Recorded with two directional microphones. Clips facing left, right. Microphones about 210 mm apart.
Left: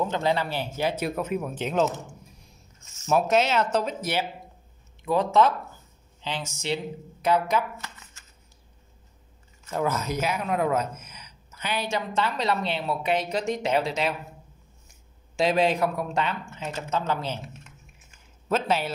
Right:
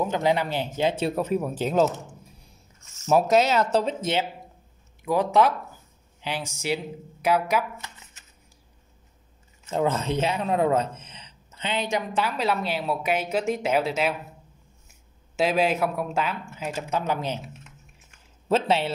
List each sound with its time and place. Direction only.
0.0 s speech: 15° right (ahead or behind)
5.0 s speech: 10° right (ahead or behind)
8.0 s a sound: 20° right (ahead or behind)
9.7 s speech: 25° right (ahead or behind); by 14.1 s 5° right (ahead or behind)
15.3 s a man's voice: 5° right (ahead or behind)
18.5 s speech: 30° right (ahead or behind)